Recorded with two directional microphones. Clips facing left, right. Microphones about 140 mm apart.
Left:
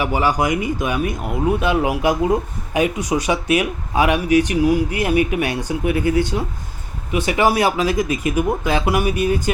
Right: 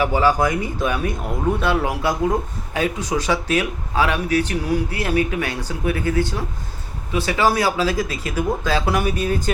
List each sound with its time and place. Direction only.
0.0 s speech: 15° left (ahead or behind)